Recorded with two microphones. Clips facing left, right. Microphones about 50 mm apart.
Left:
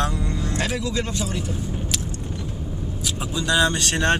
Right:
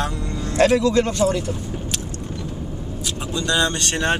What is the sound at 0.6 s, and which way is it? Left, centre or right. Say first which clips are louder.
Speech: right 12 dB; right.